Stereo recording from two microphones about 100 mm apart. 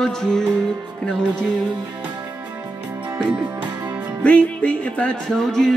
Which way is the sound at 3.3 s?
50° right (ahead or behind).